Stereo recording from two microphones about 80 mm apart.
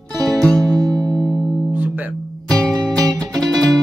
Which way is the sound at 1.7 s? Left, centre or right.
Right.